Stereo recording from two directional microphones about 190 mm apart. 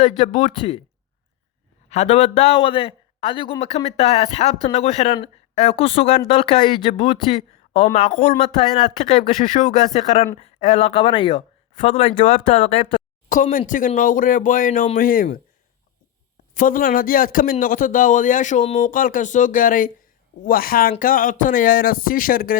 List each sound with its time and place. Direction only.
0.3 s a man's voice: 40° left (ahead or behind)
0.5 s speech: 30° left (ahead or behind)
1.9 s a man's voice: 35° left (ahead or behind)
13.2 s a man's voice: 45° left (ahead or behind)
16.6 s a man's voice: 45° left (ahead or behind)